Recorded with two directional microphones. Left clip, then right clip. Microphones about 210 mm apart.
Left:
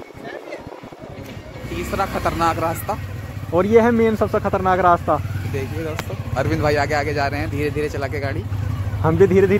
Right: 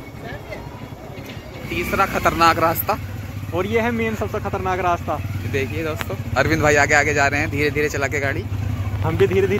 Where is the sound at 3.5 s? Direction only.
50° left (ahead or behind).